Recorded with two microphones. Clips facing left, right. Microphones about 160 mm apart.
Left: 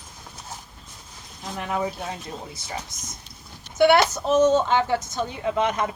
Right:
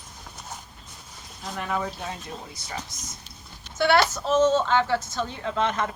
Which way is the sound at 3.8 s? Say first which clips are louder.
Left 4 dB; 20° left (ahead or behind).